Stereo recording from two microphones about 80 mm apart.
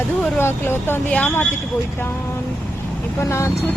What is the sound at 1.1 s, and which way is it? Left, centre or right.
Speech, centre.